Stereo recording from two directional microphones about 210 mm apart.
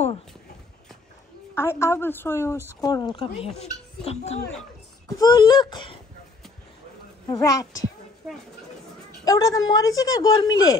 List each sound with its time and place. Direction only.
1.5 s a woman's voice: 10° left (ahead or behind); by 4.4 s 30° left (ahead or behind)
5.0 s speech: 20° left (ahead or behind)
7.2 s a woman's voice: 15° left (ahead or behind)
8.2 s speech: centre (ahead or behind)
9.2 s a woman's voice: 15° left (ahead or behind)